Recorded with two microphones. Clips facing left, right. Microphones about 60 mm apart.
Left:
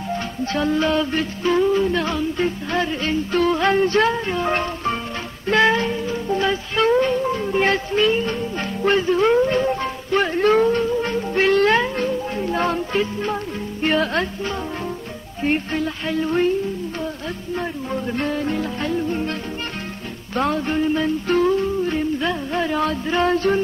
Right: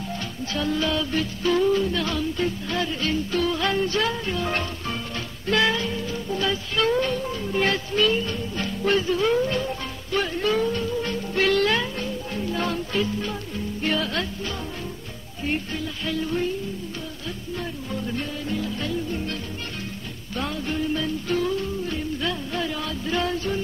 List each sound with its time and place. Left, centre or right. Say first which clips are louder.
0.5 s music: left 5 dB; left
17.6 s music: left 6 dB; left
18.2 s music: left 6 dB; left
20.3 s music: left 7 dB; left
23.3 s music: left 8 dB; left